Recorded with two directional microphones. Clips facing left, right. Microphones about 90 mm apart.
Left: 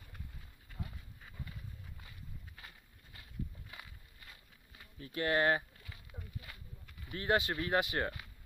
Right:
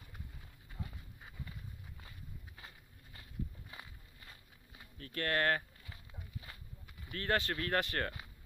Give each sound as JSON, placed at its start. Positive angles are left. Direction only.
{"t": 2.0, "sound": "walk", "side_deg": -25}
{"t": 4.9, "sound": "speech", "side_deg": 15}
{"t": 6.5, "sound": "a sound", "side_deg": -30}
{"t": 7.1, "sound": "speech", "side_deg": 15}